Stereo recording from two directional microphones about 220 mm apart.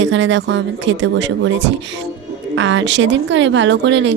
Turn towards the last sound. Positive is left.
turn(degrees=-55)  # may be behind; listen again after turning